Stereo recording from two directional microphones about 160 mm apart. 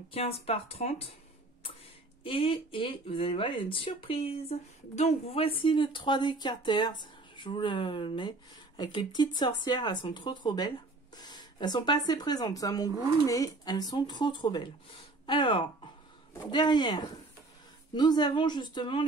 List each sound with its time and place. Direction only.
0.1 s speech: 40° left (ahead or behind)
2.2 s speech: 35° left (ahead or behind)
11.1 s a sound: 25° left (ahead or behind)
12.1 s speech: 25° left (ahead or behind)